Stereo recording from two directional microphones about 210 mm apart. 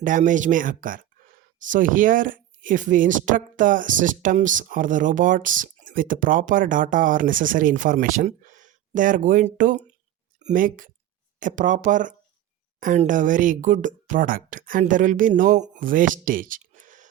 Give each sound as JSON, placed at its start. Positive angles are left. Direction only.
{"t": 0.0, "sound": "speech", "side_deg": -40}